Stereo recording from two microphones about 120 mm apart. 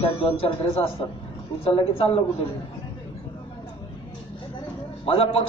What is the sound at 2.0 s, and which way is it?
Speech, 50° left (ahead or behind).